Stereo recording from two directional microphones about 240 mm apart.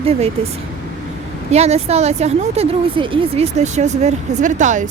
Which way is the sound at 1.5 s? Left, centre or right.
Right.